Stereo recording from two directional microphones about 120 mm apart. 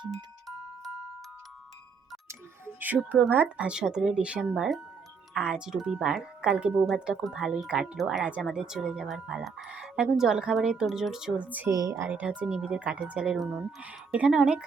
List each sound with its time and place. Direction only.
2.2 s music: 15° right (ahead or behind)
3.1 s speech: 15° right (ahead or behind)
11.7 s speech: 25° right (ahead or behind); by 14.6 s 5° right (ahead or behind)